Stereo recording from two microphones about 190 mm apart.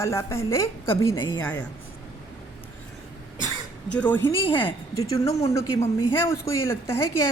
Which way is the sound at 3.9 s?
10° left (ahead or behind).